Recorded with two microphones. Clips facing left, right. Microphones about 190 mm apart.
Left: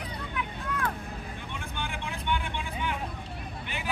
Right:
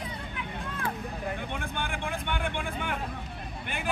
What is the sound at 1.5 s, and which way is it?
Vehicle, 55° right (ahead or behind).